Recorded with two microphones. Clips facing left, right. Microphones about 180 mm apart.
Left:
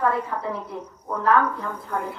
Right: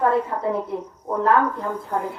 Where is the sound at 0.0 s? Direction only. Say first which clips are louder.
Right 4 dB; 25° right (ahead or behind).